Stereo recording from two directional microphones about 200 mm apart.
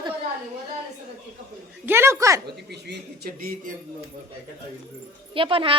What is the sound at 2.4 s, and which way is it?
Speech, 55° right (ahead or behind).